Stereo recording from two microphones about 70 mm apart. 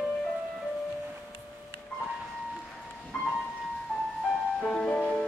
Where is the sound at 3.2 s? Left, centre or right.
Centre.